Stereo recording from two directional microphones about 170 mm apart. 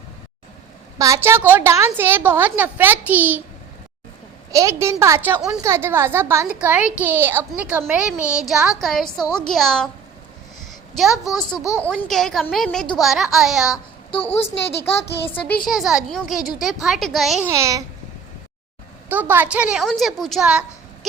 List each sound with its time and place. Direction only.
0.9 s a woman's voice: 20° right (ahead or behind)
4.5 s a woman's voice: 15° right (ahead or behind); by 9.9 s 5° left (ahead or behind)
10.6 s a sound: centre (ahead or behind)
11.5 s speech: 20° left (ahead or behind)
11.9 s a woman's voice: centre (ahead or behind)
14.1 s a woman's voice: 35° left (ahead or behind)
15.6 s a woman's voice: centre (ahead or behind)
17.4 s a woman's voice: 20° right (ahead or behind)
19.0 s a woman's voice: 10° right (ahead or behind)